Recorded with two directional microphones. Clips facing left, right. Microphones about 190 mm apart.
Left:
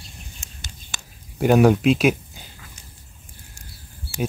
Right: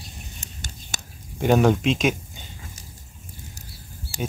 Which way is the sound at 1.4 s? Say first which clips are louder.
Left 3 dB; 5° left (ahead or behind).